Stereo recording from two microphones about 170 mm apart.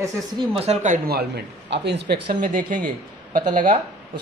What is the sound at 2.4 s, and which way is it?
Speech, 55° right (ahead or behind).